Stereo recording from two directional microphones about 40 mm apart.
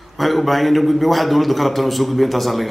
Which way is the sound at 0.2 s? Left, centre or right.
Centre.